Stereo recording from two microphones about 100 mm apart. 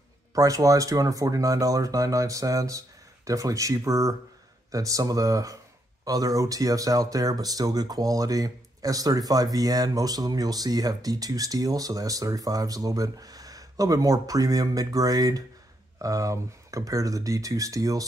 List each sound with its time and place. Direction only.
0.3 s speech: 35° right (ahead or behind)